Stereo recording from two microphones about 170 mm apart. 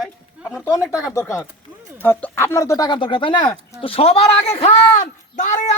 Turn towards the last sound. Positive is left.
turn(degrees=45)  # may be behind; listen again after turning